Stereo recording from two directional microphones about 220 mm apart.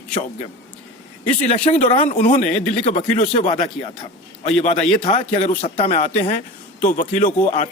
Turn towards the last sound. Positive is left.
turn(degrees=35)  # may be behind; listen again after turning